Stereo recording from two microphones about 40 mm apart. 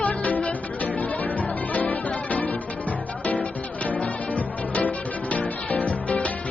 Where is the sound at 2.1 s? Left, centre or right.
Left.